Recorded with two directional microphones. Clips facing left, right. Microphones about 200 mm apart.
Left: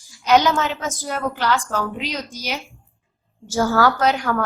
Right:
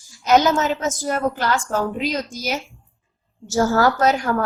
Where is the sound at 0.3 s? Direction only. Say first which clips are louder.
Right 1 dB; 45° right (ahead or behind).